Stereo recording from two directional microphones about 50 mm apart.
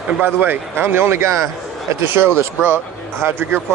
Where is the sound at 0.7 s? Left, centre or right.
Right.